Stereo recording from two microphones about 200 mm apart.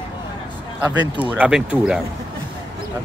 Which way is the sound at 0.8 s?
10° right (ahead or behind).